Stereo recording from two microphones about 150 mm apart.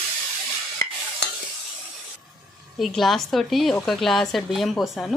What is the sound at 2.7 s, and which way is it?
A woman's voice, centre (ahead or behind).